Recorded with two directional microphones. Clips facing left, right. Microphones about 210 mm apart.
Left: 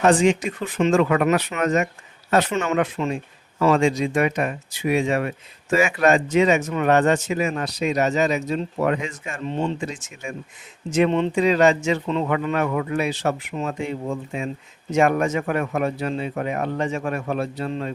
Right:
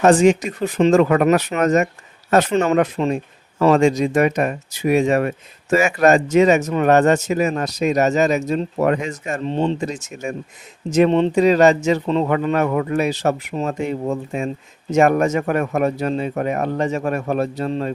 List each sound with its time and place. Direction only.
0.0 s speech: 45° right (ahead or behind)